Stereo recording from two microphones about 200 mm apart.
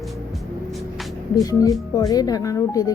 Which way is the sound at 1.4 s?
15° left (ahead or behind).